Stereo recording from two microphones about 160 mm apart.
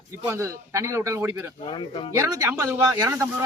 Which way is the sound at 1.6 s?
35° left (ahead or behind).